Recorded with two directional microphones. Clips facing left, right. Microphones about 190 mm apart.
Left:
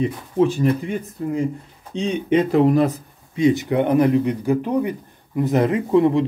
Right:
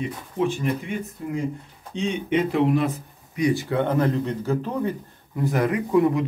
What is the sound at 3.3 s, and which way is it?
Speech, 20° left (ahead or behind).